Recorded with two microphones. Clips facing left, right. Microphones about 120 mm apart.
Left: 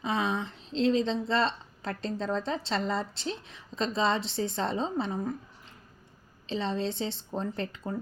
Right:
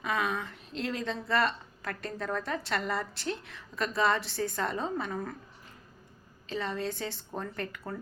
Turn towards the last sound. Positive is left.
turn(degrees=25)  # may be behind; listen again after turning